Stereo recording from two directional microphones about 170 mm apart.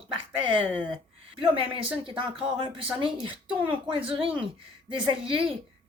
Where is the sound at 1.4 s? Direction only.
35° right (ahead or behind).